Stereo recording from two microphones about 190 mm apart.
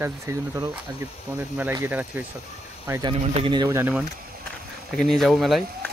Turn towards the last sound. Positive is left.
turn(degrees=0)  # may be behind; listen again after turning